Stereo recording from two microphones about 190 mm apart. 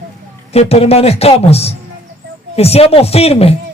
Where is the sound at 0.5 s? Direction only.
35° left (ahead or behind).